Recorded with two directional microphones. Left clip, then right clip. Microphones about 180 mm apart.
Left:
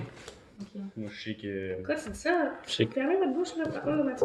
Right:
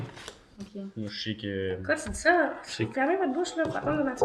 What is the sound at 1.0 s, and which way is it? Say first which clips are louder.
Speech: right 4 dB; 45° right (ahead or behind).